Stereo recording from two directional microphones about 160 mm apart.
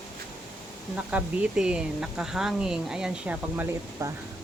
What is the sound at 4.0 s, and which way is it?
Speech, 20° right (ahead or behind).